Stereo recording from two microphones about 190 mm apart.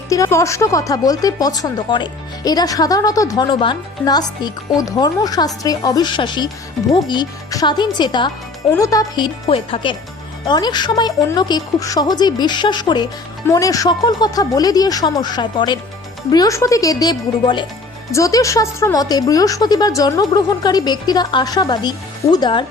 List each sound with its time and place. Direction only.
0.1 s speech: 15° left (ahead or behind)